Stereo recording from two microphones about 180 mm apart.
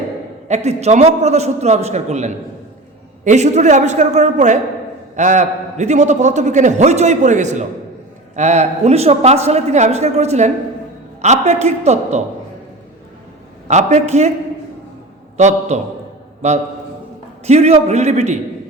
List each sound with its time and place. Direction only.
0.4 s a man's voice: 40° right (ahead or behind)
13.7 s a man's voice: 40° right (ahead or behind)
15.4 s a man's voice: 40° right (ahead or behind)
17.4 s a man's voice: 35° right (ahead or behind)